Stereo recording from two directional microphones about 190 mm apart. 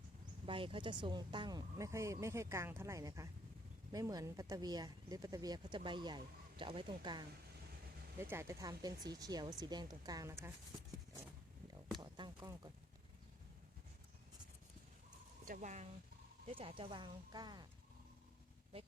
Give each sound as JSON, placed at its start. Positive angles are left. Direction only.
{"t": 0.4, "sound": "speech", "side_deg": -25}
{"t": 8.2, "sound": "speech", "side_deg": -15}
{"t": 11.7, "sound": "a sound", "side_deg": -20}
{"t": 15.4, "sound": "speech", "side_deg": -40}
{"t": 16.5, "sound": "speech", "side_deg": -30}